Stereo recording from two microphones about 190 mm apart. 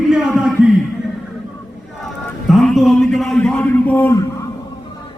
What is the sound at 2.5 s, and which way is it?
A man's voice, centre (ahead or behind).